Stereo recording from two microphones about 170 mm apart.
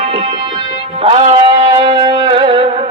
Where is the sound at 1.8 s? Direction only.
30° right (ahead or behind).